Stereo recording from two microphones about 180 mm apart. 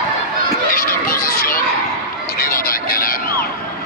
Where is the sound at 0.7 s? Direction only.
55° left (ahead or behind).